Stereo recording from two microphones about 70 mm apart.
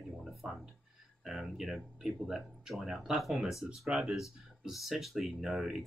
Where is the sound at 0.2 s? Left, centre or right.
Centre.